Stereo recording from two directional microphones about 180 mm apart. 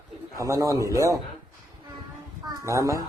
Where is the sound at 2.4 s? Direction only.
15° right (ahead or behind).